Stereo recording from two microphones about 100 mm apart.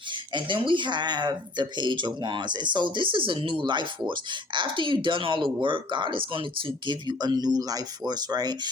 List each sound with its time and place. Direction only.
0.1 s speech: 55° right (ahead or behind)